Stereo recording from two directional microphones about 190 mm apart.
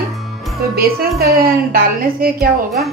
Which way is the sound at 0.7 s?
55° right (ahead or behind).